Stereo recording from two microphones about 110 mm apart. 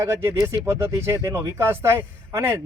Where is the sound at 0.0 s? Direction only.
25° right (ahead or behind).